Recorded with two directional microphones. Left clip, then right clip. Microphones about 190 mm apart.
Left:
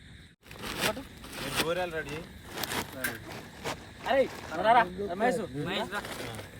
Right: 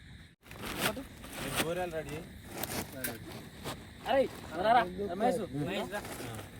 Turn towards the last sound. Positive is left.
turn(degrees=15)  # may be behind; listen again after turning